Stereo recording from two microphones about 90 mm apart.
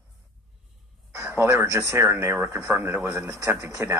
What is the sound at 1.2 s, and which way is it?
A woman's voice, 35° right (ahead or behind).